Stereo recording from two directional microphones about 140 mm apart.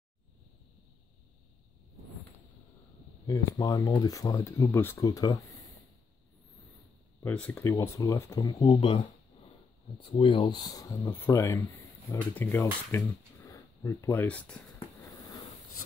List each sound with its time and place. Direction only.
3.3 s speech: 25° left (ahead or behind)
7.2 s speech: 15° left (ahead or behind)
8.7 s speech: 35° left (ahead or behind); by 14.6 s 10° left (ahead or behind)